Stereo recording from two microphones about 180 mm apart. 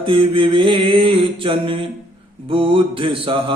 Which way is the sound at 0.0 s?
30° right (ahead or behind).